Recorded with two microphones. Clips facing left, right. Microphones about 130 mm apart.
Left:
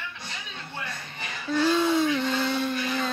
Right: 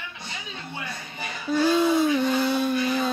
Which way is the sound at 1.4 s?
10° right (ahead or behind).